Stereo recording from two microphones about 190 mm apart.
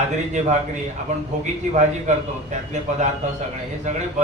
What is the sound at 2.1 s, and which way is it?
Speech, 40° right (ahead or behind).